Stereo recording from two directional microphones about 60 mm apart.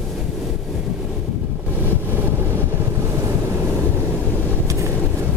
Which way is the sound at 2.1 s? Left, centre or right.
Right.